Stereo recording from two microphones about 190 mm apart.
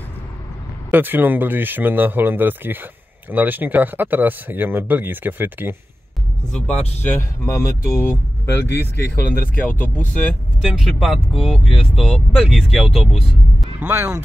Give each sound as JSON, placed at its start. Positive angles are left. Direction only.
{"t": 0.9, "sound": "speech", "side_deg": -10}
{"t": 7.1, "sound": "speech", "side_deg": 15}
{"t": 8.5, "sound": "speech", "side_deg": 65}
{"t": 8.9, "sound": "speech", "side_deg": 55}
{"t": 9.6, "sound": "speech", "side_deg": 10}
{"t": 13.7, "sound": "speech", "side_deg": -10}